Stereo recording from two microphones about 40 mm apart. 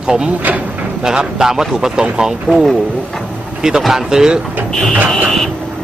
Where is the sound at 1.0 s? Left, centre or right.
Centre.